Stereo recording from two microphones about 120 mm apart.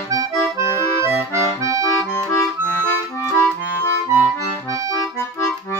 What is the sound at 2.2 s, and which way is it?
Accordion, 25° left (ahead or behind).